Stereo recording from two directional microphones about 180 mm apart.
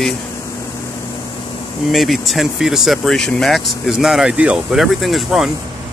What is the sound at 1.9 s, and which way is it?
Speech, centre (ahead or behind).